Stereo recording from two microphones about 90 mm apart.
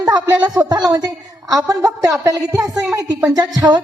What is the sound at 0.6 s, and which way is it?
A woman's voice, 45° right (ahead or behind).